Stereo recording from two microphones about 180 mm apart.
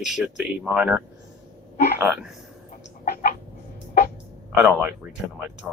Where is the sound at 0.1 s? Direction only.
Centre (ahead or behind).